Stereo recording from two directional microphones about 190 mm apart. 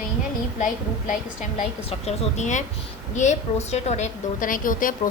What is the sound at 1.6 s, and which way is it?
A woman's voice, 35° left (ahead or behind).